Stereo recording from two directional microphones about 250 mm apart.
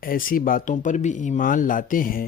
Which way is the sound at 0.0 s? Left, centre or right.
Left.